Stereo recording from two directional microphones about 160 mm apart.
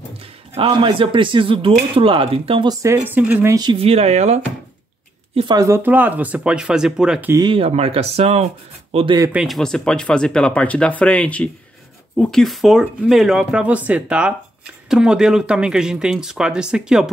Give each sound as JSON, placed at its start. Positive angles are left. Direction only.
{"t": 0.6, "sound": "speech", "side_deg": -30}
{"t": 3.5, "sound": "speech", "side_deg": -30}
{"t": 5.6, "sound": "speech", "side_deg": -15}
{"t": 7.3, "sound": "speech", "side_deg": -30}
{"t": 9.3, "sound": "speech", "side_deg": 0}